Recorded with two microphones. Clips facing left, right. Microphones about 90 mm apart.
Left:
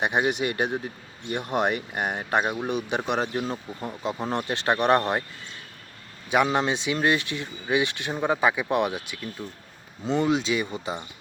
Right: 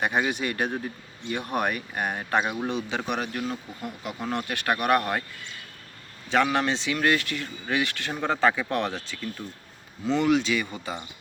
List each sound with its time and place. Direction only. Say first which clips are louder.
0.0 s speech: left 2 dB; 20° left (ahead or behind)
6.3 s speech: left 1 dB; 15° left (ahead or behind)